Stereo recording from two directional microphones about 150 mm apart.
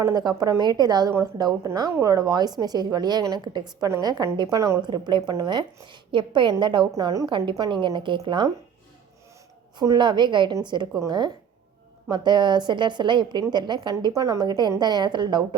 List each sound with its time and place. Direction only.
0.0 s a woman's voice: 25° right (ahead or behind)
9.7 s a woman's voice: 30° right (ahead or behind)